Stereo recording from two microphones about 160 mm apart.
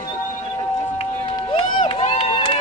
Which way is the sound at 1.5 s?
30° left (ahead or behind).